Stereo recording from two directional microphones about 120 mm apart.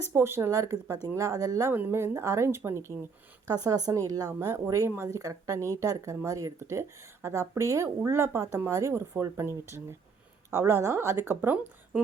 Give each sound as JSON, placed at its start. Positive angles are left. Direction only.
{"t": 0.0, "sound": "speech", "side_deg": -20}